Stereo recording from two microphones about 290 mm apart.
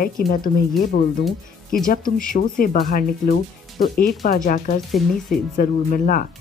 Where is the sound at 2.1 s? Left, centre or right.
Left.